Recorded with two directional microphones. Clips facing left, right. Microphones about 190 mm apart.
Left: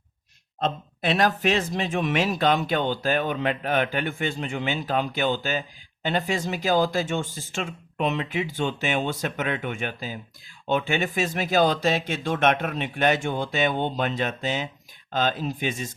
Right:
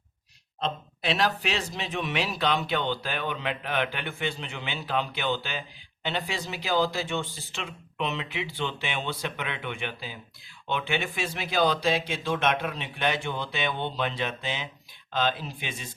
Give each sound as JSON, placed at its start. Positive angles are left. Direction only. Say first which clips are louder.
{"t": 0.6, "sound": "speech", "louder": "left 4 dB", "side_deg": 50}